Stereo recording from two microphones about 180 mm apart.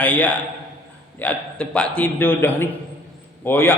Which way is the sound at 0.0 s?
10° left (ahead or behind).